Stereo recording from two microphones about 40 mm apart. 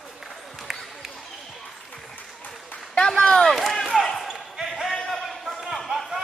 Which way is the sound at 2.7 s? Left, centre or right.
Left.